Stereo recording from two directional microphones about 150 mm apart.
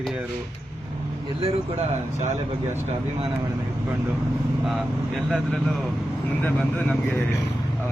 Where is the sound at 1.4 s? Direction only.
45° right (ahead or behind).